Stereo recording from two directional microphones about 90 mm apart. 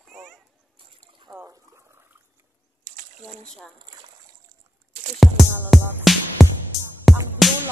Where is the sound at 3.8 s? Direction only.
60° right (ahead or behind).